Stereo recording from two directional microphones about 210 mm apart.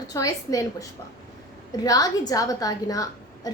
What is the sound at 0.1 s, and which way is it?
A woman's voice, 15° left (ahead or behind).